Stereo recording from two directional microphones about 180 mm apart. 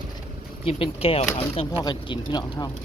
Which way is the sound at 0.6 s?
30° left (ahead or behind).